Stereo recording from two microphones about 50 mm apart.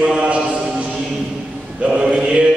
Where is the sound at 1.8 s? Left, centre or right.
Centre.